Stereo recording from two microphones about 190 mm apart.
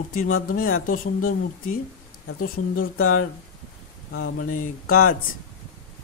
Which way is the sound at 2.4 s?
50° left (ahead or behind).